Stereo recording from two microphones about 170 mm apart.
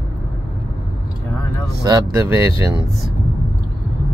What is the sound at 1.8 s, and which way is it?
Speech, 20° right (ahead or behind).